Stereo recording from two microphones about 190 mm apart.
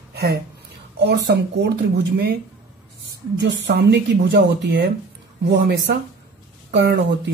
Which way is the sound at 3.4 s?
65° right (ahead or behind).